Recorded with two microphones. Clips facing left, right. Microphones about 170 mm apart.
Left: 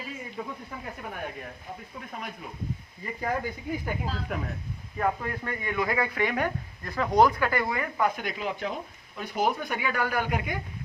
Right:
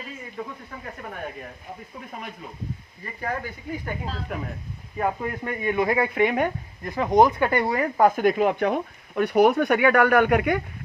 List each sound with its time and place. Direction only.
0.4 s speech: 10° left (ahead or behind)
3.0 s speech: 15° left (ahead or behind)
4.0 s speech: centre (ahead or behind)
4.9 s speech: 20° right (ahead or behind); by 10.6 s 65° right (ahead or behind)